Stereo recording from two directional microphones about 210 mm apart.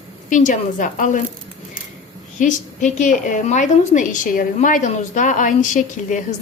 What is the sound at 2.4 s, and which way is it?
A woman's voice, 35° left (ahead or behind).